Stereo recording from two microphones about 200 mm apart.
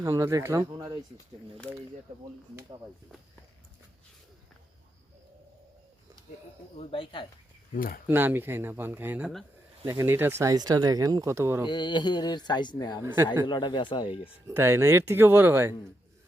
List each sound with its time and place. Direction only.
0.0 s speech: 15° right (ahead or behind)
2.6 s speech: 20° right (ahead or behind)
6.7 s speech: 25° left (ahead or behind)
7.7 s speech: 45° left (ahead or behind)
8.0 s speech: 10° right (ahead or behind)
11.6 s speech: 20° left (ahead or behind)
14.4 s speech: 10° right (ahead or behind)